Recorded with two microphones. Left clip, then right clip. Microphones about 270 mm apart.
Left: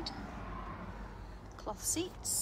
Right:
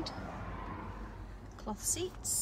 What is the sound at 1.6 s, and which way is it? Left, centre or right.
Speech, centre.